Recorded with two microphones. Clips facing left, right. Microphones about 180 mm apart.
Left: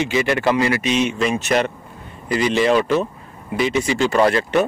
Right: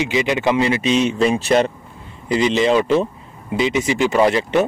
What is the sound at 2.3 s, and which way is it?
Speech, 20° right (ahead or behind).